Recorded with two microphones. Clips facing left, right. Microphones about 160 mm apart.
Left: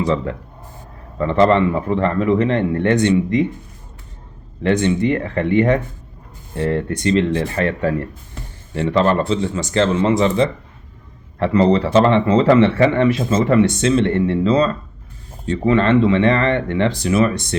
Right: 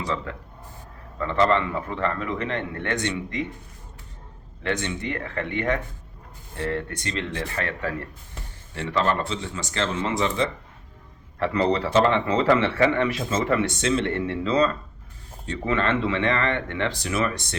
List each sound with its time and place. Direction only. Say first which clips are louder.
0.0 s speech: left 10 dB; 25° left (ahead or behind)
4.6 s speech: left 11 dB; 20° left (ahead or behind)